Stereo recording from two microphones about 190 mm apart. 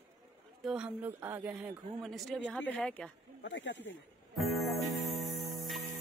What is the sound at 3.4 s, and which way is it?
Speech, 70° left (ahead or behind).